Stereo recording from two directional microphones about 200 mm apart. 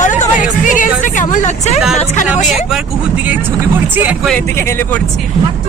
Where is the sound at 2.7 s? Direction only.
5° right (ahead or behind).